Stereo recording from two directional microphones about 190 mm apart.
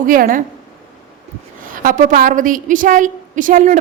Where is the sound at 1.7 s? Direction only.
45° right (ahead or behind).